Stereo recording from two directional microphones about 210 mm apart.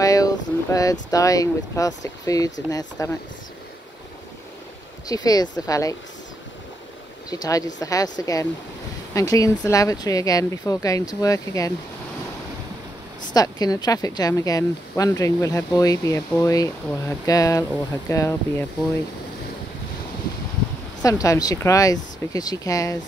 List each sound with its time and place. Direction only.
0.0 s a sound: 15° left (ahead or behind)
1.1 s speech: 15° left (ahead or behind)
5.0 s speech: 15° left (ahead or behind)
7.2 s speech: 15° left (ahead or behind)
13.3 s speech: 20° left (ahead or behind)
21.0 s speech: 15° left (ahead or behind)